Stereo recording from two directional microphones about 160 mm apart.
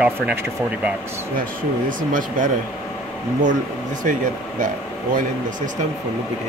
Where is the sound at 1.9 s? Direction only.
55° right (ahead or behind).